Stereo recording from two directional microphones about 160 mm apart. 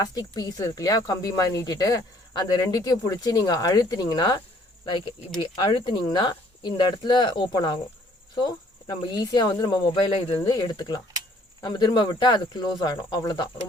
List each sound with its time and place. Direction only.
0.0 s speech: 25° left (ahead or behind)
10.4 s speech: 25° left (ahead or behind)